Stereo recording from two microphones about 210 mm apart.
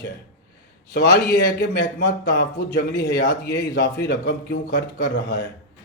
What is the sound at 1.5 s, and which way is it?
A man's voice, 50° left (ahead or behind).